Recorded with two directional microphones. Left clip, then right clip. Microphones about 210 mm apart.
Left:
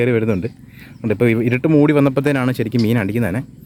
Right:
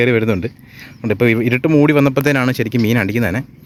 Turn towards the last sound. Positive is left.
turn(degrees=-5)  # may be behind; listen again after turning